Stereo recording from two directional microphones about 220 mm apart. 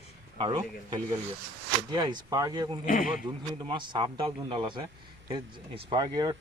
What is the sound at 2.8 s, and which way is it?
Speech, 40° left (ahead or behind).